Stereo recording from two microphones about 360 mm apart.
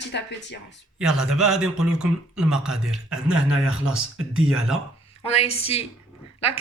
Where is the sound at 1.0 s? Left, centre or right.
Centre.